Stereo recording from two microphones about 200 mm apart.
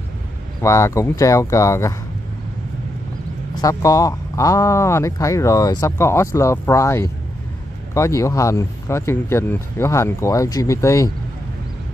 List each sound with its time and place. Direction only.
0.6 s speech: 15° left (ahead or behind)
3.6 s speech: 15° left (ahead or behind)